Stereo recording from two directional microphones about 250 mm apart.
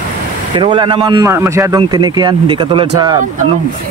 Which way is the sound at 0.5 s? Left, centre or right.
Centre.